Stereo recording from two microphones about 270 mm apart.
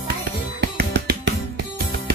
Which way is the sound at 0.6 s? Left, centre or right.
Right.